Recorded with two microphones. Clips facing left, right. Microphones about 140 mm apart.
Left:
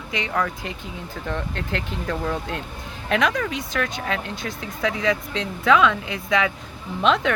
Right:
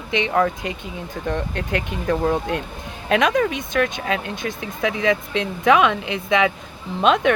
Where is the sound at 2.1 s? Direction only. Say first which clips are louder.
Right 7 dB; 45° right (ahead or behind).